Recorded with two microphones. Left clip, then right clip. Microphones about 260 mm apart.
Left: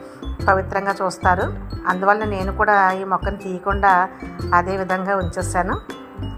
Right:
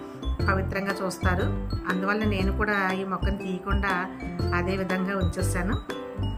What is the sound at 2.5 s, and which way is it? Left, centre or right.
A woman's voice, centre.